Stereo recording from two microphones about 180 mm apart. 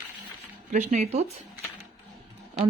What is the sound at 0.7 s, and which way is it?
Speech, 45° right (ahead or behind).